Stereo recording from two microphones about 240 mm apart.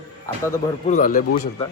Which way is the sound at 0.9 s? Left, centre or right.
Left.